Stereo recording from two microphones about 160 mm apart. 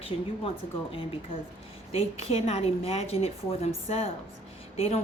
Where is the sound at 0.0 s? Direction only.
35° left (ahead or behind).